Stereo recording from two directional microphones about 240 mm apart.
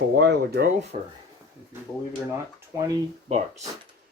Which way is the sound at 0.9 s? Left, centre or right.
Right.